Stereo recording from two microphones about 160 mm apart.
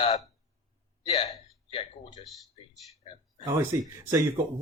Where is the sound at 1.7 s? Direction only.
35° left (ahead or behind).